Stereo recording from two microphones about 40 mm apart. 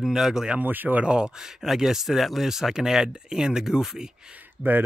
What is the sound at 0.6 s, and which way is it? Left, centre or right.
Speech, right.